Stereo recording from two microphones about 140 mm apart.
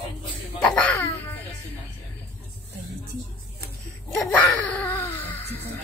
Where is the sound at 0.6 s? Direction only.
5° left (ahead or behind).